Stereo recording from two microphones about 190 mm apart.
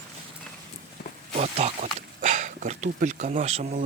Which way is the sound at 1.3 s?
35° right (ahead or behind).